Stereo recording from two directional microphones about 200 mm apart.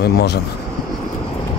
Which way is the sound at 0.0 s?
55° left (ahead or behind).